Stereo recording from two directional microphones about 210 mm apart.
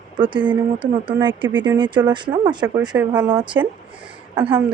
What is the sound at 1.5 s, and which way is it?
Speech, 10° right (ahead or behind).